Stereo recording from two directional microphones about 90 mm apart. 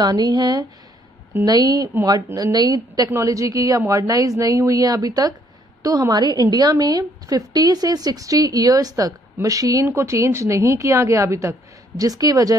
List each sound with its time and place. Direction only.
0.0 s a woman's voice: 50° right (ahead or behind)
3.1 s a woman's voice: 35° right (ahead or behind)